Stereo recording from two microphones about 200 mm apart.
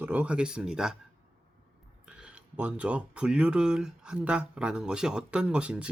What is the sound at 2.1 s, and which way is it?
Speech, 5° right (ahead or behind).